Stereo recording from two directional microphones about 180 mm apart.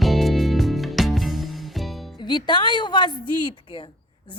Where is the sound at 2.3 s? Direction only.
25° left (ahead or behind).